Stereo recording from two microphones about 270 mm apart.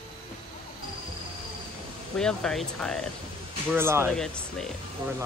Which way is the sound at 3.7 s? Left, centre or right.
Centre.